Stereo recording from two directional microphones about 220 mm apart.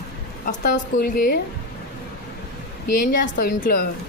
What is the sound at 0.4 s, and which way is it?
Speech, 35° left (ahead or behind).